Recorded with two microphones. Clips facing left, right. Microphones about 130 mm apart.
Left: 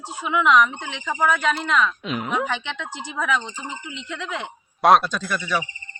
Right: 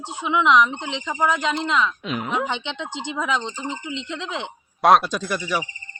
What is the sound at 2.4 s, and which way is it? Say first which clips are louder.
A woman's voice: even; 20° right (ahead or behind).